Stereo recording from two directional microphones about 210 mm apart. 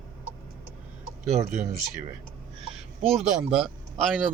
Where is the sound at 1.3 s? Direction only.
35° right (ahead or behind).